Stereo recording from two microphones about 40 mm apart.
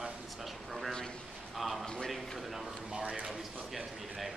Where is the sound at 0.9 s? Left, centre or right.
Centre.